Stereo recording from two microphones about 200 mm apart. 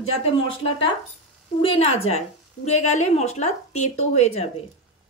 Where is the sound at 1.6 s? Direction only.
30° left (ahead or behind).